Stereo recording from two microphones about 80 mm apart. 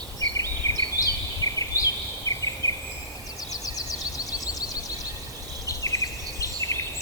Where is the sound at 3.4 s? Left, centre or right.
Left.